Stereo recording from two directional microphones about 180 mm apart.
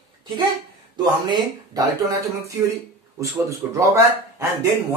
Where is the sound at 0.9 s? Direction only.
20° right (ahead or behind).